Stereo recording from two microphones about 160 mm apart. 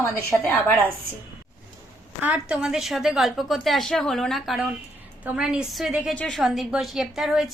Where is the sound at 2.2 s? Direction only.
5° right (ahead or behind).